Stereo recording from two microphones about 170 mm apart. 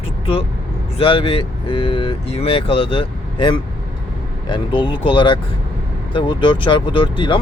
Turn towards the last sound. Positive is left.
turn(degrees=30)  # may be behind; listen again after turning